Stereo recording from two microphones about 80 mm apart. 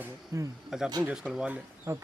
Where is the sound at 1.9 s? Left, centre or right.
Right.